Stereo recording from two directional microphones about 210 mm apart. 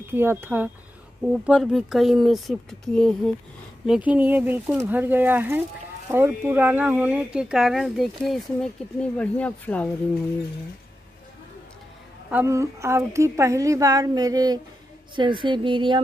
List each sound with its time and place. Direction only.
0.1 s a woman's voice: 10° right (ahead or behind); by 9.8 s 5° left (ahead or behind)
12.3 s a woman's voice: 10° right (ahead or behind)